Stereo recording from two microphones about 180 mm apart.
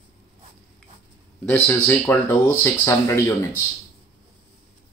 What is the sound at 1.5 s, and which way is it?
Speech, 10° left (ahead or behind).